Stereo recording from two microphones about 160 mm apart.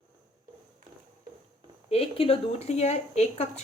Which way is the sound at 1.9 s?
35° left (ahead or behind).